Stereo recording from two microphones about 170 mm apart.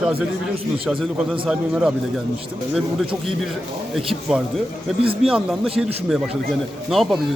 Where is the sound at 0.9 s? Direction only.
5° right (ahead or behind).